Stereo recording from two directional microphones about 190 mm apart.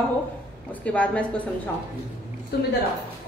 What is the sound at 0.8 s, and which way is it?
Speech, 5° left (ahead or behind).